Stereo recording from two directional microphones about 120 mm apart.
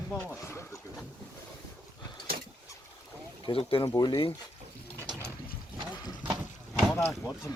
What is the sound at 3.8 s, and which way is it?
Speech, 30° left (ahead or behind).